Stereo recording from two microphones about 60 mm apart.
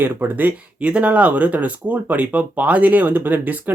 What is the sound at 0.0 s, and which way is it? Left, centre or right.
Speech, right.